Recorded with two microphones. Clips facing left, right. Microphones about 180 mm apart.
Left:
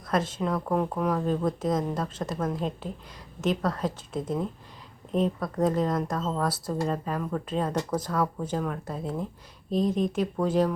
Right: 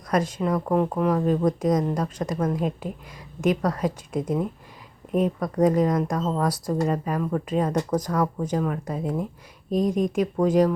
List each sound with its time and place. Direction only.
0.1 s a woman's voice: centre (ahead or behind)
5.5 s a woman's voice: centre (ahead or behind)
9.6 s speech: 45° right (ahead or behind)
10.3 s speech: 10° right (ahead or behind)